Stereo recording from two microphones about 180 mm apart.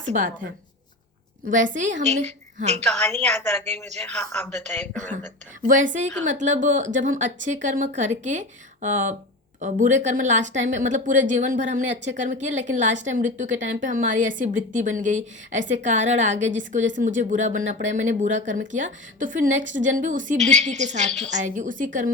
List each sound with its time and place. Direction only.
1.5 s speech: 45° right (ahead or behind)
2.8 s a woman's voice: 5° left (ahead or behind)
4.9 s a woman's voice: 40° right (ahead or behind)